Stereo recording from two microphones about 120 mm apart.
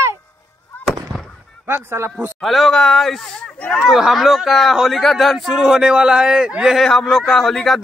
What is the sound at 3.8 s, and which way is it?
Speech, centre (ahead or behind).